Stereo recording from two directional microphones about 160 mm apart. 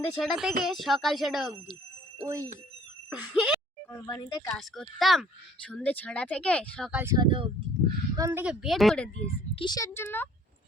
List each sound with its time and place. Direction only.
0.2 s speech: centre (ahead or behind)
2.2 s speech: 20° right (ahead or behind)
3.1 s speech: 5° right (ahead or behind)
4.0 s speech: 25° left (ahead or behind)
4.4 s speech: 5° left (ahead or behind)
6.9 s speech: 15° right (ahead or behind)
7.2 s speech: 30° right (ahead or behind)
8.1 s a woman's voice: 15° right (ahead or behind)
8.6 s speech: centre (ahead or behind)
9.6 s speech: 25° left (ahead or behind)